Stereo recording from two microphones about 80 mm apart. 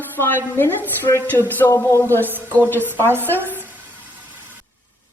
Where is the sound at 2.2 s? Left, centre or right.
Right.